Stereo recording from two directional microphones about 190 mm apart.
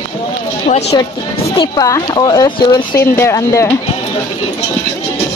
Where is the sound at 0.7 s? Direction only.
40° left (ahead or behind).